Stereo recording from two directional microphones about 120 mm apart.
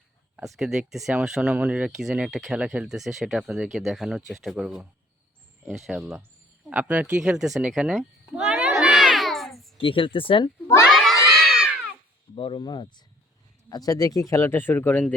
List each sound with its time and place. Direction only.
0.4 s speech: centre (ahead or behind)
8.4 s a sound: 5° right (ahead or behind)
9.7 s speech: 45° left (ahead or behind)
10.8 s children shouting: 5° left (ahead or behind)
12.3 s speech: 45° left (ahead or behind); by 15.0 s 15° left (ahead or behind)